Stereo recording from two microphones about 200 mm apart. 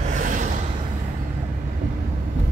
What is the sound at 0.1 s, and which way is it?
Gasp, 40° right (ahead or behind).